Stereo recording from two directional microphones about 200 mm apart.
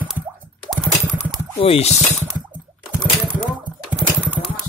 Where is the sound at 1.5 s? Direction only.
30° left (ahead or behind).